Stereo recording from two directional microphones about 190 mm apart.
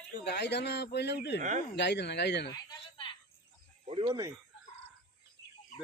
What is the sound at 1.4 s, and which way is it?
Speech, 40° right (ahead or behind).